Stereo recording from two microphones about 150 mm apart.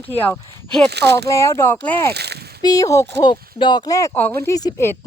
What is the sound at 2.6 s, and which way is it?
A woman's voice, 25° left (ahead or behind).